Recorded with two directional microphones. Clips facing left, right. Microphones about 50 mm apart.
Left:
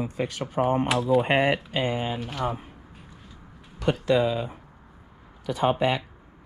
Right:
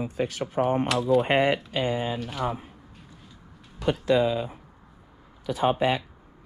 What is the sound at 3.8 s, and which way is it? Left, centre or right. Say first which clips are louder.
Speech: even; left.